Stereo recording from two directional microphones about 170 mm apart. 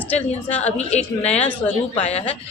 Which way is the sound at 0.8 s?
40° left (ahead or behind).